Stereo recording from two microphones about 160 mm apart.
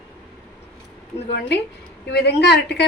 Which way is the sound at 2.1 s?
90° left.